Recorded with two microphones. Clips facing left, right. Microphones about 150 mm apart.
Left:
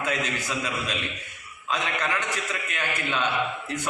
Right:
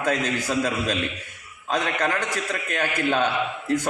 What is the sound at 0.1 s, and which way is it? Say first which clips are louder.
A man's voice: right 8 dB; 35° right (ahead or behind).